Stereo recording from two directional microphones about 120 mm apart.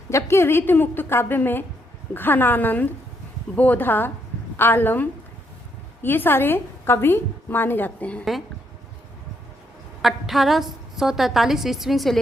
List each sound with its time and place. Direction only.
0.1 s a woman's voice: 20° left (ahead or behind)
10.0 s a woman's voice: centre (ahead or behind)